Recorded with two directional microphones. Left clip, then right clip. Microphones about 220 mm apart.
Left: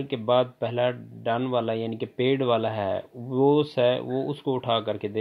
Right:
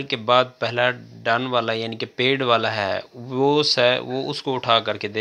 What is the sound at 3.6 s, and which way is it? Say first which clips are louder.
Speech: right 5 dB; 15° right (ahead or behind).